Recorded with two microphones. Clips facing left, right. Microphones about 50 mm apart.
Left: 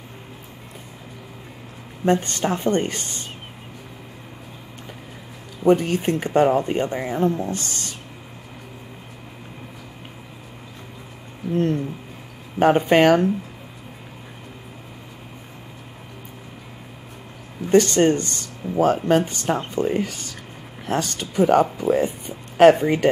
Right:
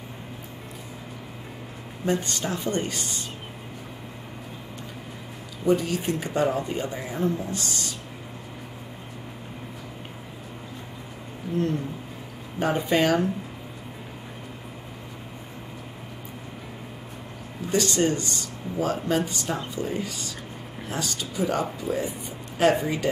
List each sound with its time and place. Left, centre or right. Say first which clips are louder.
2.0 s speech: left 6 dB; left
5.6 s speech: left 5 dB; left
12.5 s speech: left 8 dB; left
17.6 s speech: left 7 dB; left